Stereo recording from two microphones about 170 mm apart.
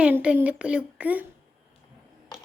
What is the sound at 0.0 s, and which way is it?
Speech, 5° right (ahead or behind).